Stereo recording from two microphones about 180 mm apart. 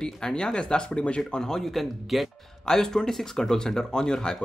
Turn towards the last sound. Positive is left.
turn(degrees=5)  # may be behind; listen again after turning